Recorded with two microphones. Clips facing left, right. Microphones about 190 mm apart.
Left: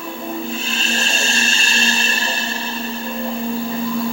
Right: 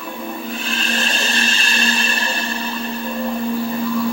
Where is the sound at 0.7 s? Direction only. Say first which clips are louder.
Right 1 dB; 25° left (ahead or behind).